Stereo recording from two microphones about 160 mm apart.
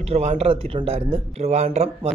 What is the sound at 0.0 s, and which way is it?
Speech, 45° right (ahead or behind).